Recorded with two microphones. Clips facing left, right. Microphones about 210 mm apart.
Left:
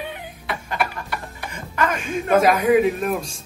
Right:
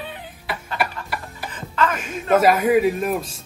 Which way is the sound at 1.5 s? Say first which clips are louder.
Right 1 dB; 10° left (ahead or behind).